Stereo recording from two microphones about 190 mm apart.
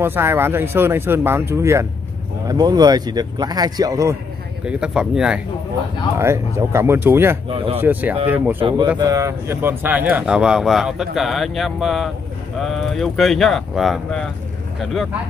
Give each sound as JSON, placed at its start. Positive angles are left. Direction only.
{"t": 0.0, "sound": "speech", "side_deg": -10}
{"t": 4.6, "sound": "speech", "side_deg": -5}
{"t": 7.4, "sound": "speech", "side_deg": -30}
{"t": 7.8, "sound": "speech", "side_deg": -10}
{"t": 8.5, "sound": "speech", "side_deg": -25}